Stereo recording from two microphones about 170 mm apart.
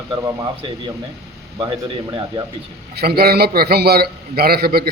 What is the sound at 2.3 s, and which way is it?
Speech, 30° right (ahead or behind).